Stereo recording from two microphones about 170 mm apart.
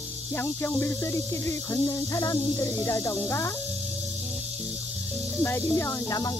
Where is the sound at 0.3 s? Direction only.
15° left (ahead or behind).